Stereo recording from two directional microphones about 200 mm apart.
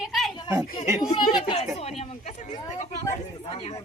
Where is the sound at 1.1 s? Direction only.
20° left (ahead or behind).